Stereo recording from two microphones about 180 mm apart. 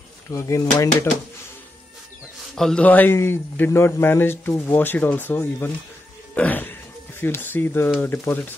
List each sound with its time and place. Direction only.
0.3 s a man's voice: 15° left (ahead or behind)
2.5 s a man's voice: 5° left (ahead or behind)